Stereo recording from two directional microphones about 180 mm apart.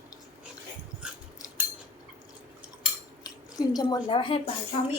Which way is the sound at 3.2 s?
20° left (ahead or behind).